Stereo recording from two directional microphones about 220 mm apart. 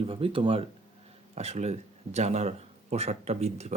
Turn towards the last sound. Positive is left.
turn(degrees=-30)  # may be behind; listen again after turning